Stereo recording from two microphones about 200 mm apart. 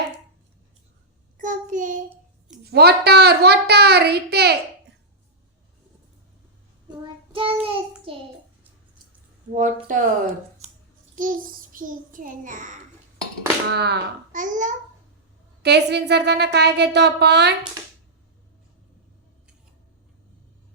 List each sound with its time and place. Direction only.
1.4 s child singing: 40° right (ahead or behind)
2.6 s a child's voice: 55° right (ahead or behind)
7.0 s child singing: 25° right (ahead or behind)
9.6 s speech: 40° right (ahead or behind)
11.1 s a child's voice: 40° right (ahead or behind)
13.7 s a child's voice: 55° right (ahead or behind)
14.3 s speech: 40° right (ahead or behind)
15.6 s a child's voice: 55° right (ahead or behind)
17.8 s a sound: 15° right (ahead or behind)